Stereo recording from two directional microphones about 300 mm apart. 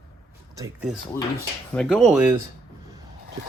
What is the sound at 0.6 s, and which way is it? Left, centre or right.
Speech, centre.